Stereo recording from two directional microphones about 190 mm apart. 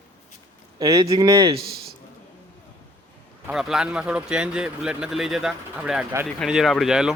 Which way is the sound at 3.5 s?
Centre (ahead or behind).